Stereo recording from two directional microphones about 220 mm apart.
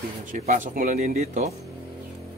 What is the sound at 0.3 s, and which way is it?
Speech, 35° right (ahead or behind).